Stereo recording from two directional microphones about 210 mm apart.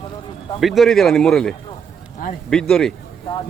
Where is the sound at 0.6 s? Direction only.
Centre (ahead or behind).